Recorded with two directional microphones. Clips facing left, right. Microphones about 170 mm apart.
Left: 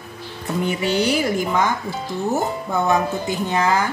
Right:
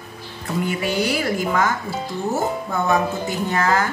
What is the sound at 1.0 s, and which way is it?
Speech, 20° left (ahead or behind).